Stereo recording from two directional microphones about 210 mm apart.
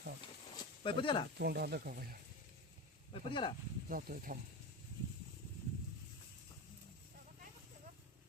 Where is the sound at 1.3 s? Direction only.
50° right (ahead or behind).